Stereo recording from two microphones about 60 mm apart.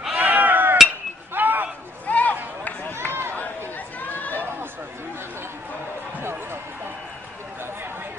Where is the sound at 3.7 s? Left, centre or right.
Left.